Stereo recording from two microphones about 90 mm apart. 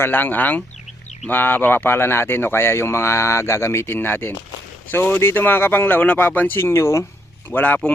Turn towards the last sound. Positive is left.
turn(degrees=20)  # may be behind; listen again after turning